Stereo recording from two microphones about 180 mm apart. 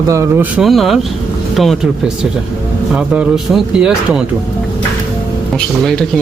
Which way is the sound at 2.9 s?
5° right (ahead or behind).